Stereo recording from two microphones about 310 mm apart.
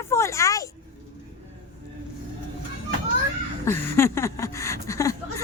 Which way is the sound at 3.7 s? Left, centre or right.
Centre.